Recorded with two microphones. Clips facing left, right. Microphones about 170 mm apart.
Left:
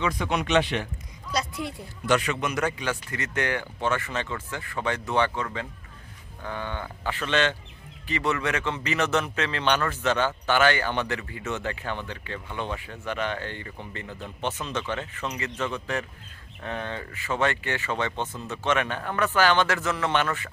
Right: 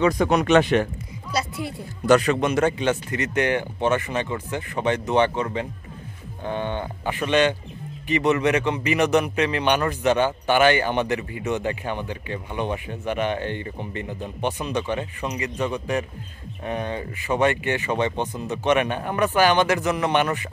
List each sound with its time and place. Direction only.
0.0 s speech: 40° right (ahead or behind)
1.3 s speech: 5° right (ahead or behind)
2.0 s speech: 40° right (ahead or behind); by 20.4 s 15° right (ahead or behind)